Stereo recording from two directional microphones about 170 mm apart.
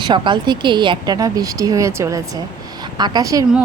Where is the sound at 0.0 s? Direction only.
25° right (ahead or behind).